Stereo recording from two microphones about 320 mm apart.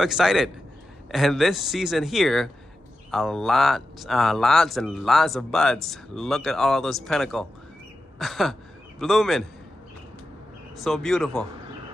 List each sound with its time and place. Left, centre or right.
0.0 s speech: centre
10.8 s speech: centre